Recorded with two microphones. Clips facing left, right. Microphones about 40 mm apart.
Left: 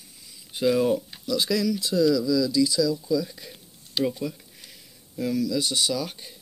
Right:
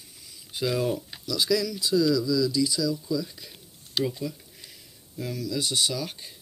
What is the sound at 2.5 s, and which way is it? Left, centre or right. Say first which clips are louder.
Speech: left 4 dB; right.